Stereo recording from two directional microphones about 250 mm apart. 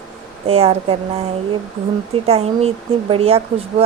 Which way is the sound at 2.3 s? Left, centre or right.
Right.